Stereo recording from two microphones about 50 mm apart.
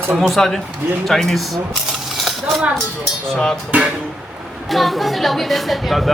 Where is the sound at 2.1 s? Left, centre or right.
Centre.